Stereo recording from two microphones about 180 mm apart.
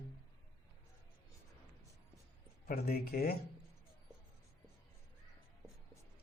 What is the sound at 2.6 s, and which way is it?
Speech, 55° left (ahead or behind).